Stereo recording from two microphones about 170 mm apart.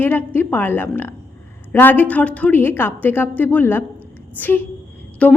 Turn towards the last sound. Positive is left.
turn(degrees=5)  # may be behind; listen again after turning